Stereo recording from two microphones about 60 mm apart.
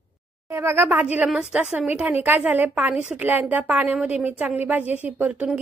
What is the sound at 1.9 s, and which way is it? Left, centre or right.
A woman's voice, right.